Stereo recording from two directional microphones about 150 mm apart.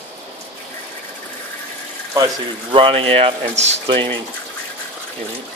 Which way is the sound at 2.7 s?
40° right (ahead or behind).